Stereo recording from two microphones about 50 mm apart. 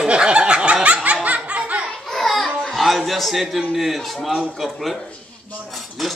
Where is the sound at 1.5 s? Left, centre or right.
Right.